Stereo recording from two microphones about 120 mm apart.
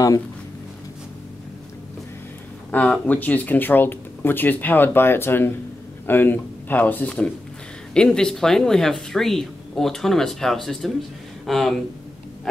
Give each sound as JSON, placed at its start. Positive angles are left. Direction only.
{"t": 2.7, "sound": "speech", "side_deg": 15}